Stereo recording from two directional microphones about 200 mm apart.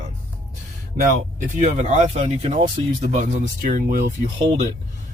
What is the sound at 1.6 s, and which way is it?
Speech, 35° right (ahead or behind).